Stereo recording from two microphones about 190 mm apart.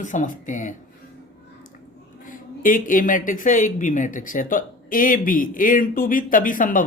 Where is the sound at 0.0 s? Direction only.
40° left (ahead or behind).